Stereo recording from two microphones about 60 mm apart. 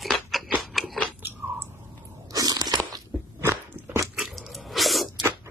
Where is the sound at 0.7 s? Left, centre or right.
Centre.